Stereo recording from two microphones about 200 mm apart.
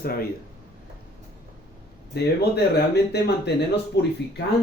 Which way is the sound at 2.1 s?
55° left (ahead or behind).